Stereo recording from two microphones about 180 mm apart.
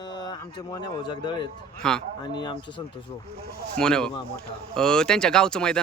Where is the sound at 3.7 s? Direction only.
5° left (ahead or behind).